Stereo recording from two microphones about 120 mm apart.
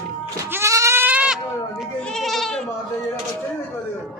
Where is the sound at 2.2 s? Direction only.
Centre (ahead or behind).